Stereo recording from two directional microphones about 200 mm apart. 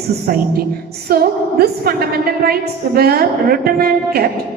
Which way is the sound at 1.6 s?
50° right (ahead or behind).